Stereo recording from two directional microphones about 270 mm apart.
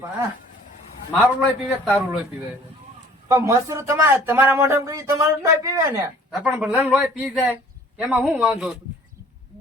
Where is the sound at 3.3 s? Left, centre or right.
Centre.